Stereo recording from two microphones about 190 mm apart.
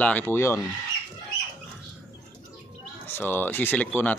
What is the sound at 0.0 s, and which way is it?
Speech, 10° left (ahead or behind).